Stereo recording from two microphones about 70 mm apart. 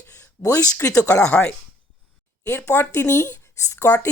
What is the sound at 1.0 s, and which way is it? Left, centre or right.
Speech, left.